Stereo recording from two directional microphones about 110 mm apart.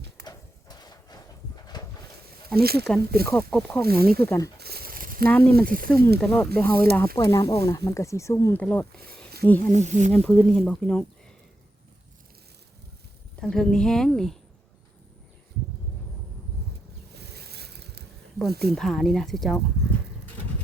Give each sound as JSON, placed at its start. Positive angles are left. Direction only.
{"t": 0.3, "sound": "a sound", "side_deg": 40}
{"t": 2.5, "sound": "speech", "side_deg": 5}
{"t": 5.3, "sound": "speech", "side_deg": 15}
{"t": 8.5, "sound": "speech", "side_deg": 15}
{"t": 9.1, "sound": "a sound", "side_deg": 10}
{"t": 9.7, "sound": "speech", "side_deg": -90}
{"t": 10.1, "sound": "speech", "side_deg": 10}
{"t": 13.4, "sound": "speech", "side_deg": 5}
{"t": 18.3, "sound": "speech", "side_deg": 0}